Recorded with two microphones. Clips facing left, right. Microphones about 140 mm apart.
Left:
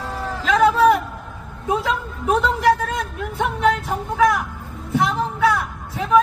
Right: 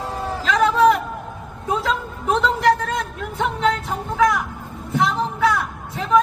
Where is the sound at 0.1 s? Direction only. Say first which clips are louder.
Even; 20° right (ahead or behind).